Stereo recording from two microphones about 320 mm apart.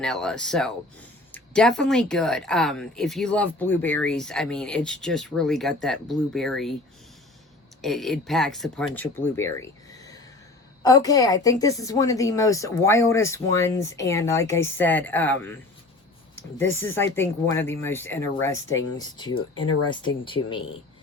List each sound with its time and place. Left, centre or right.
0.0 s speech: centre
7.8 s a woman's voice: centre
16.6 s a woman's voice: centre